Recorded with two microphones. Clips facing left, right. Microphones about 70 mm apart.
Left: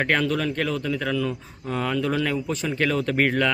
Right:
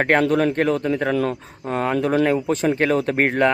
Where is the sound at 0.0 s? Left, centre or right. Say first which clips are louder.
Right 6 dB; right.